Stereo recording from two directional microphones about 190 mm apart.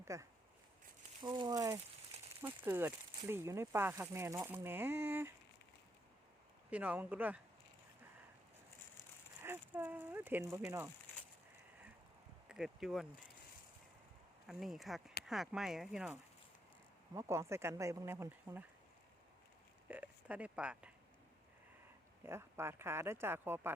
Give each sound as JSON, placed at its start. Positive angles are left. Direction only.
{"t": 0.0, "sound": "speech", "side_deg": -15}
{"t": 6.7, "sound": "speech", "side_deg": -5}
{"t": 9.4, "sound": "speech", "side_deg": -10}
{"t": 12.5, "sound": "speech", "side_deg": -5}
{"t": 14.4, "sound": "speech", "side_deg": 0}
{"t": 17.2, "sound": "speech", "side_deg": -15}
{"t": 19.9, "sound": "speech", "side_deg": -10}
{"t": 22.2, "sound": "speech", "side_deg": -15}